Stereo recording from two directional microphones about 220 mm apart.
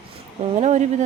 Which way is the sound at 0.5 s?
30° right (ahead or behind).